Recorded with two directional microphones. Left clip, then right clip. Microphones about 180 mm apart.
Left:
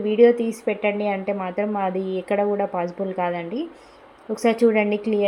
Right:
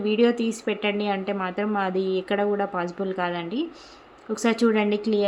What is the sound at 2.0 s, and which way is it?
Speech, 30° left (ahead or behind).